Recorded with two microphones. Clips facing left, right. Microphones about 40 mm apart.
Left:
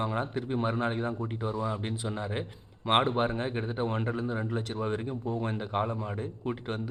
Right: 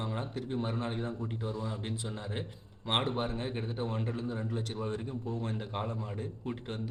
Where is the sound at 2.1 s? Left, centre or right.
Left.